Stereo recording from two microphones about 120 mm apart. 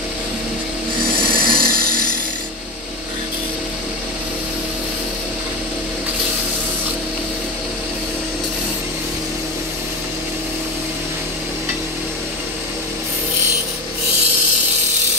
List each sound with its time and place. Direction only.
1.2 s wood: 45° right (ahead or behind)